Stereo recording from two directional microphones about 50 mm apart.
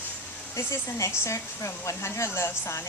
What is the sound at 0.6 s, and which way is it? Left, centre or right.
Speech, left.